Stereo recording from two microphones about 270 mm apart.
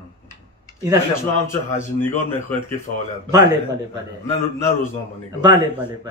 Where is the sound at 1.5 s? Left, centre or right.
Centre.